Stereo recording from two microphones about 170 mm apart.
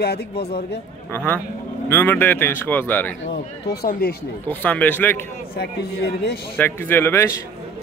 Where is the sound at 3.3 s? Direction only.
70° left (ahead or behind).